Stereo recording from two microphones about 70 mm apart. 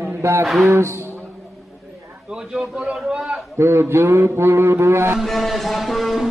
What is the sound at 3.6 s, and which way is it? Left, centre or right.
A man's voice, right.